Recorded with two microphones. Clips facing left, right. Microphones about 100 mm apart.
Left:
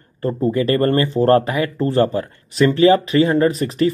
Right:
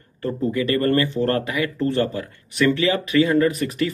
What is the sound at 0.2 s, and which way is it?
Speech, 30° left (ahead or behind).